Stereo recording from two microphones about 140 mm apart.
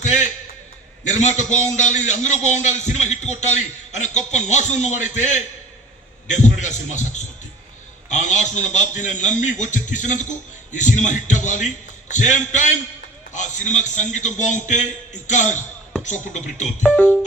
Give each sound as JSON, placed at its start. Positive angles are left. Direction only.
{"t": 0.0, "sound": "a sound", "side_deg": 60}
{"t": 1.0, "sound": "a man's voice", "side_deg": 55}
{"t": 16.8, "sound": "speech", "side_deg": 5}